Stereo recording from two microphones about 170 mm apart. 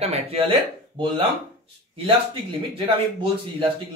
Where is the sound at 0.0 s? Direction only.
35° right (ahead or behind).